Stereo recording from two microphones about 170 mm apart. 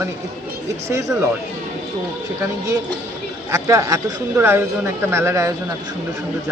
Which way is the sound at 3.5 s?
15° right (ahead or behind).